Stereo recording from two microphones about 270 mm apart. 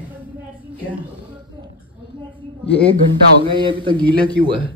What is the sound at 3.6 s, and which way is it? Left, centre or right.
Speech, centre.